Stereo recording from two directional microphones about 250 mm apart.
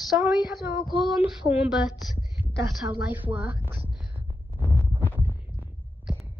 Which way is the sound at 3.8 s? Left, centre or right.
Centre.